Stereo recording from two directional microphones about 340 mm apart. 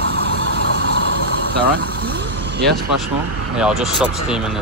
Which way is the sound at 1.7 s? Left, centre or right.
Right.